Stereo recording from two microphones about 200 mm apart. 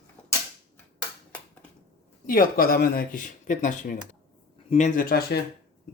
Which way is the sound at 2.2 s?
45° left (ahead or behind).